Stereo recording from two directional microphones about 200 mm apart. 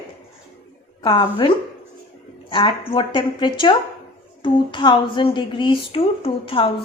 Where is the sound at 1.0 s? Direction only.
25° left (ahead or behind).